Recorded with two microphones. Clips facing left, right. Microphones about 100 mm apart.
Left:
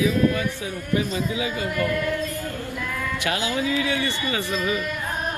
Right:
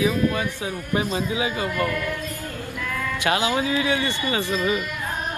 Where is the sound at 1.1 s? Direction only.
30° right (ahead or behind).